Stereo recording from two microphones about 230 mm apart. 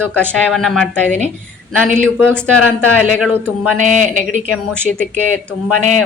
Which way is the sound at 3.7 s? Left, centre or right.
Right.